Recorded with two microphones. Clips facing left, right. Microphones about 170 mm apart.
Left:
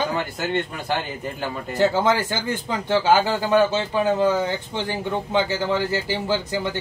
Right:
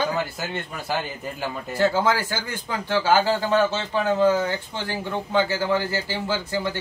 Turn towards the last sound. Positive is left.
turn(degrees=15)  # may be behind; listen again after turning